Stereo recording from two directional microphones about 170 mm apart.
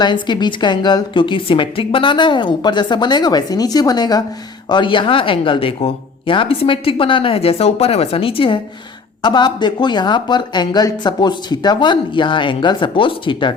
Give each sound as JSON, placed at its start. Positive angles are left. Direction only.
{"t": 0.0, "sound": "speech", "side_deg": 25}